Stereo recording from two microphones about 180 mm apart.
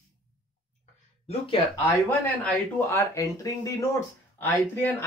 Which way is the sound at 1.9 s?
10° left (ahead or behind).